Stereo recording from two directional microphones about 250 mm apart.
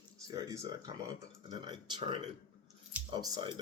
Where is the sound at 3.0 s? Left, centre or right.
Centre.